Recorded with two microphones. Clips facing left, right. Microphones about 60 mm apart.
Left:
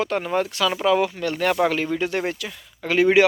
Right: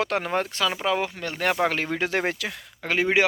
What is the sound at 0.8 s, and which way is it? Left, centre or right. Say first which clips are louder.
Speech: left 6 dB; right.